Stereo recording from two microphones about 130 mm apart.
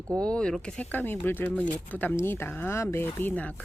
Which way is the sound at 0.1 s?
5° left (ahead or behind).